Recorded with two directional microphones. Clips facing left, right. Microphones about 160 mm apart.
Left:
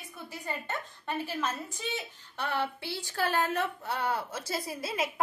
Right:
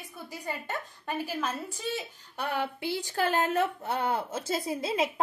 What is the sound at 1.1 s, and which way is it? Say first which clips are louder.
A woman's voice: right 1 dB; 10° right (ahead or behind).